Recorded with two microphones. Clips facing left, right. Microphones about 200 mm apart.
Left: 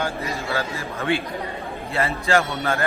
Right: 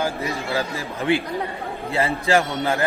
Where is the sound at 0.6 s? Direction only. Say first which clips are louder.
Right 2 dB; 15° right (ahead or behind).